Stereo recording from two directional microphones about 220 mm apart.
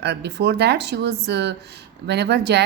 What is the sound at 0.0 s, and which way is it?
Speech, 50° right (ahead or behind).